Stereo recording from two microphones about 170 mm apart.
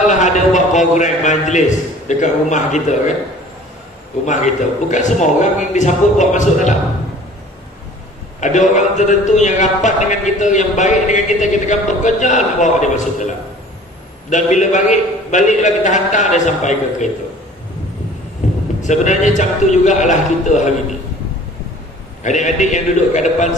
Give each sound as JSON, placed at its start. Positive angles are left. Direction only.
{"t": 0.0, "sound": "a man's voice", "side_deg": 45}
{"t": 4.3, "sound": "a man's voice", "side_deg": 45}
{"t": 8.4, "sound": "a man's voice", "side_deg": 45}
{"t": 14.3, "sound": "a man's voice", "side_deg": 45}
{"t": 18.8, "sound": "a man's voice", "side_deg": 45}
{"t": 22.2, "sound": "a man's voice", "side_deg": 45}